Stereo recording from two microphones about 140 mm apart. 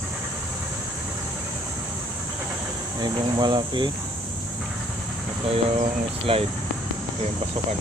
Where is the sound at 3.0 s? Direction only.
30° right (ahead or behind).